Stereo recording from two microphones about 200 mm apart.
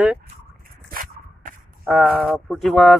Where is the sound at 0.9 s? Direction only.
40° right (ahead or behind).